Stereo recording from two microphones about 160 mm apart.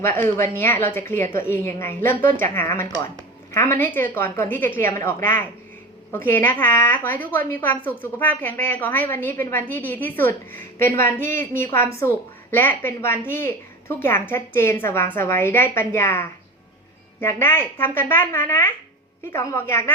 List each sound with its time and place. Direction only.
0.0 s speech: 15° left (ahead or behind)